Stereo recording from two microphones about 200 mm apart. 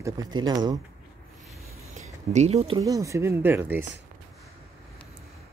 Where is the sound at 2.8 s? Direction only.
15° right (ahead or behind).